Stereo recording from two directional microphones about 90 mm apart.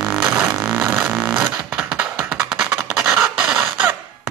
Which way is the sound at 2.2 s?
25° right (ahead or behind).